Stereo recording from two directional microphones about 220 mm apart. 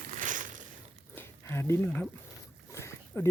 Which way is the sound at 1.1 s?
10° left (ahead or behind).